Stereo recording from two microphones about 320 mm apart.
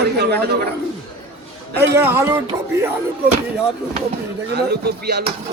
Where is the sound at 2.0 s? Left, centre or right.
Centre.